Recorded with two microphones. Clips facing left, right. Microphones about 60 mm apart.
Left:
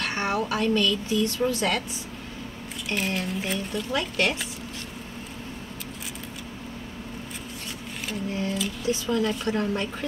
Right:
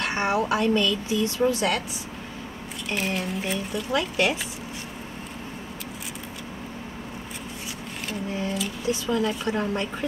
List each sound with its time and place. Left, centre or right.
0.0 s speech: centre
2.9 s speech: centre
8.4 s speech: centre